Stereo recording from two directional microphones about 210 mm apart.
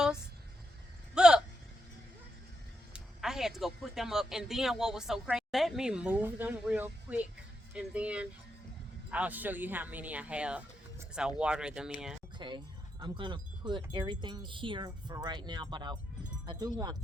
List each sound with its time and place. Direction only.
1.1 s a sound: 5° right (ahead or behind)
2.9 s speech: centre (ahead or behind)
12.4 s speech: 20° right (ahead or behind)